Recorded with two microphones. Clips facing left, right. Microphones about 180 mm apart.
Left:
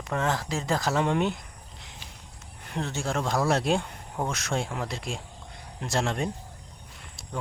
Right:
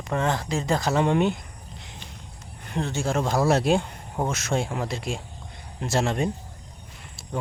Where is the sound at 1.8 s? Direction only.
Centre (ahead or behind).